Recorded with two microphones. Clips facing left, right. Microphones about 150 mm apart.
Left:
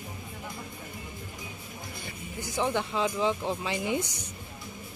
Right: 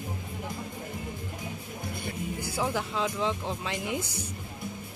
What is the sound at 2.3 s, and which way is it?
Speech, 10° right (ahead or behind).